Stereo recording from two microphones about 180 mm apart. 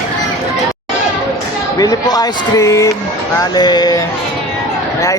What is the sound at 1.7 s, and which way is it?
Speech, 20° left (ahead or behind).